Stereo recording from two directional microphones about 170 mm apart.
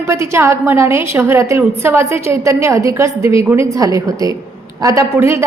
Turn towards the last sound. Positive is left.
turn(degrees=-15)  # may be behind; listen again after turning